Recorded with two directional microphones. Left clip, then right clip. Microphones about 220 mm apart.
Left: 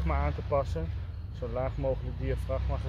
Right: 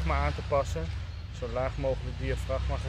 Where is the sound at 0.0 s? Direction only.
15° left (ahead or behind).